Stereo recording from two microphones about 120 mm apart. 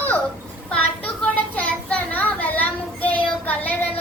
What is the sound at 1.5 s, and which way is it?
Child singing, 10° left (ahead or behind).